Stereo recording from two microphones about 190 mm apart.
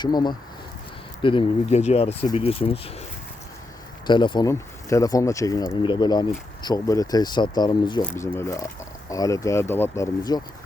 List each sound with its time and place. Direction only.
0.0 s speech: 20° left (ahead or behind)
4.0 s speech: 25° left (ahead or behind)